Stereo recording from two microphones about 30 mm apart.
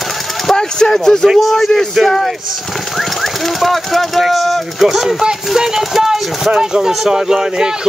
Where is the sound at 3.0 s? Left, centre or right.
Centre.